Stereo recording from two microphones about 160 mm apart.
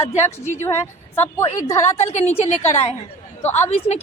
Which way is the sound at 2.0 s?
45° left (ahead or behind).